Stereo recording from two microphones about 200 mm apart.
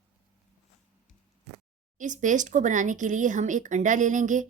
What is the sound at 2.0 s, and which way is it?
Speech, 40° right (ahead or behind).